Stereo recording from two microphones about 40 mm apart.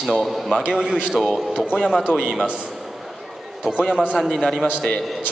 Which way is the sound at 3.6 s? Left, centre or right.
Right.